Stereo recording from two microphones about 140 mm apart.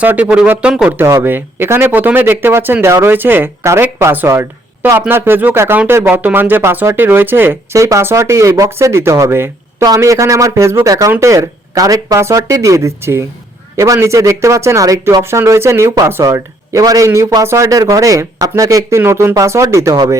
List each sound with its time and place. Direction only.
0.0 s a man's voice: 10° right (ahead or behind)